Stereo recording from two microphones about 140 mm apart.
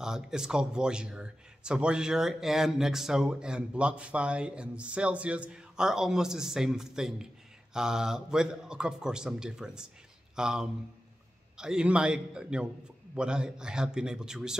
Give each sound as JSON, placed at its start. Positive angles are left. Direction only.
{"t": 0.0, "sound": "a man's voice", "side_deg": -5}